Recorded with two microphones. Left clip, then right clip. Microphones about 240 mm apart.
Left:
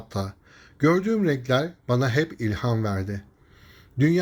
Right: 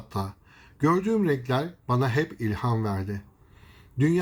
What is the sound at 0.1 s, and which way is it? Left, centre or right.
Speech, centre.